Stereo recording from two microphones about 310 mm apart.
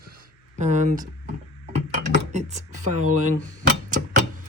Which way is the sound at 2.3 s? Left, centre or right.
Right.